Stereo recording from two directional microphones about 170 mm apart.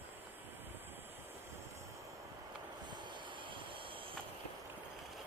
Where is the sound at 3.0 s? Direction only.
30° right (ahead or behind).